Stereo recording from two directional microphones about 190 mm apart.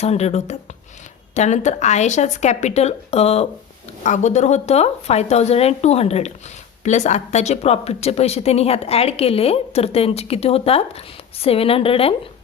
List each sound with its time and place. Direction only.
0.0 s speech: 35° left (ahead or behind)